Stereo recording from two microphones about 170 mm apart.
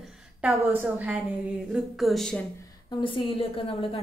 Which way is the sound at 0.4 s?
10° right (ahead or behind).